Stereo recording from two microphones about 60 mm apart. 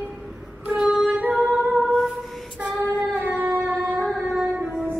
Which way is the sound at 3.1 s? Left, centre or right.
Right.